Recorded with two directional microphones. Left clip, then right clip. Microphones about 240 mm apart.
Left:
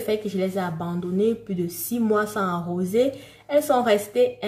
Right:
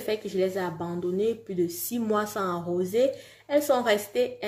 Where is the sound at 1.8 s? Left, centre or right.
Right.